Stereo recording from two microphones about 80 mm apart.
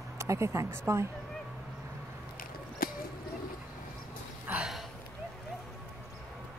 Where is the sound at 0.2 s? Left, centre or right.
Right.